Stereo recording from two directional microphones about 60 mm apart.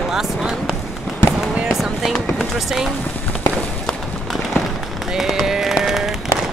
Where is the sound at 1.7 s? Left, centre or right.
Centre.